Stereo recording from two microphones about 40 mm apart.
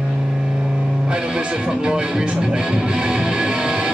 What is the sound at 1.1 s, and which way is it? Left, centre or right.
Music, right.